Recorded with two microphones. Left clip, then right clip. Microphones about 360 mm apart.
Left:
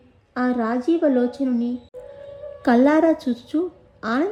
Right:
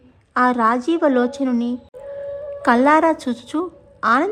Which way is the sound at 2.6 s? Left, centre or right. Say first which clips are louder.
Right 3 dB; centre.